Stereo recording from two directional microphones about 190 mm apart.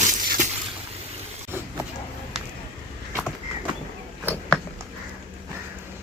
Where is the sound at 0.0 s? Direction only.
40° right (ahead or behind).